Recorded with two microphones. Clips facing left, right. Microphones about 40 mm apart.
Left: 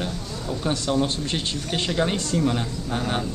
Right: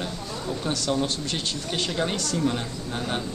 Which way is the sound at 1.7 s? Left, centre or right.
Centre.